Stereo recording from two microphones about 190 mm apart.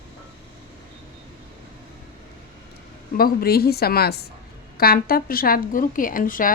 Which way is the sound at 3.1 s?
50° left (ahead or behind).